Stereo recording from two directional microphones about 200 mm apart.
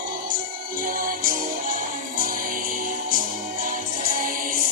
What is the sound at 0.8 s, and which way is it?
Music, 45° right (ahead or behind).